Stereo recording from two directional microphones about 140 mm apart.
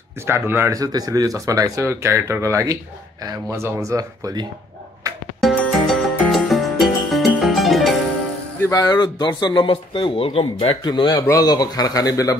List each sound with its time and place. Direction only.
0.2 s speech: 15° right (ahead or behind)
5.4 s music: centre (ahead or behind)
8.5 s speech: 20° left (ahead or behind)